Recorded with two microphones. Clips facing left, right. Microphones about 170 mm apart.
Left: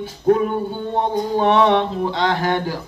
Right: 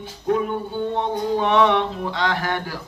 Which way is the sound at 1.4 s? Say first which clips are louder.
Left 3 dB; 35° left (ahead or behind).